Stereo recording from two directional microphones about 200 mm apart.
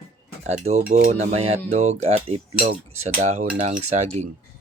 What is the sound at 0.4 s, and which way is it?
Speech, 35° right (ahead or behind).